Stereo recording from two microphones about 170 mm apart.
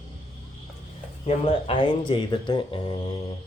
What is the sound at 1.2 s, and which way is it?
Speech, 30° left (ahead or behind).